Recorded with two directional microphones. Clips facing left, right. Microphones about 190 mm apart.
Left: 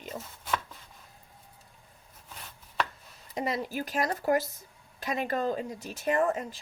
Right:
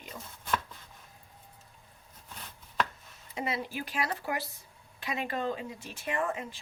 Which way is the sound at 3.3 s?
40° left (ahead or behind).